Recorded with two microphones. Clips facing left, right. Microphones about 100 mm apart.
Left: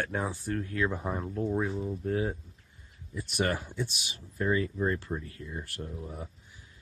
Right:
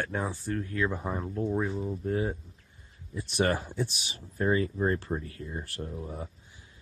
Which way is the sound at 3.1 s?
30° right (ahead or behind).